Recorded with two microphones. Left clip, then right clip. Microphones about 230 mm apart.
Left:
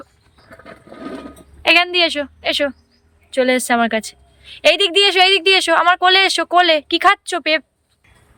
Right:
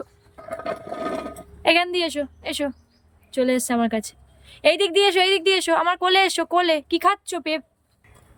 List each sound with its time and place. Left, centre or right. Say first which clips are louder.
0.0 s wild animals: right 5 dB; centre
1.6 s a woman's voice: left 6 dB; centre